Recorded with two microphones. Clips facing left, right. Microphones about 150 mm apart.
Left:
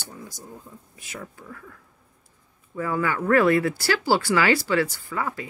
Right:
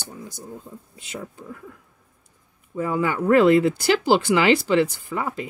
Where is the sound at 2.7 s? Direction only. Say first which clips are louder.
Right 2 dB; 20° right (ahead or behind).